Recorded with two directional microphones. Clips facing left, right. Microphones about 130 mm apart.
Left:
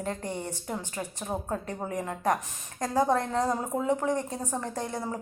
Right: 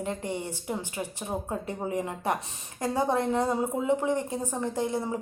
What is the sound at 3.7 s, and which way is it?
Speech, 15° right (ahead or behind).